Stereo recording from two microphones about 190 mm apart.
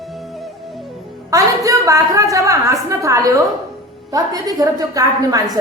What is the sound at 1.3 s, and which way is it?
A woman's voice, 15° right (ahead or behind).